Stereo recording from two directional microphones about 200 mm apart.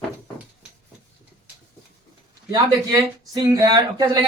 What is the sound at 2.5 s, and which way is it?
A man's voice, 20° right (ahead or behind).